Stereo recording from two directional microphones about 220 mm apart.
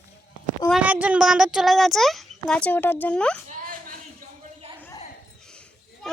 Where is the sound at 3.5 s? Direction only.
35° right (ahead or behind).